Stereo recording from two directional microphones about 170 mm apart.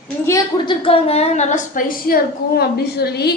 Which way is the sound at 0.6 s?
35° left (ahead or behind).